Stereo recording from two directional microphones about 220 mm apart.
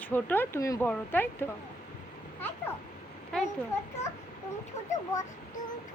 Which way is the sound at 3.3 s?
5° left (ahead or behind).